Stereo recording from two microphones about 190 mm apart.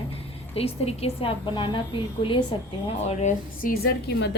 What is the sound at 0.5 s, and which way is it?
A woman's voice, 30° left (ahead or behind).